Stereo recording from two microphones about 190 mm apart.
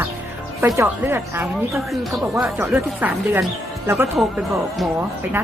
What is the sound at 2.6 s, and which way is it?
Speech, 10° right (ahead or behind).